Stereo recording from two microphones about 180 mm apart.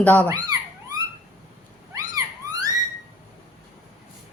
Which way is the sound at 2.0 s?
20° right (ahead or behind).